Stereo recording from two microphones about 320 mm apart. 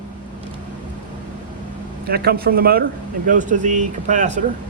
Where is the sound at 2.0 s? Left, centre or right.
Right.